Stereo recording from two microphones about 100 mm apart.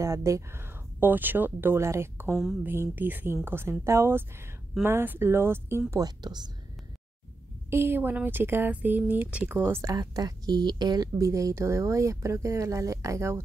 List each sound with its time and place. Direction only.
0.0 s speech: 30° right (ahead or behind)
5.9 s speech: 40° right (ahead or behind)
7.7 s speech: 25° right (ahead or behind)
9.9 s a woman's voice: 40° right (ahead or behind)